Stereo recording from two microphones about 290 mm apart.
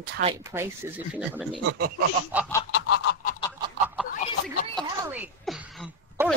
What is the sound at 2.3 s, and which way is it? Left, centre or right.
Speech, centre.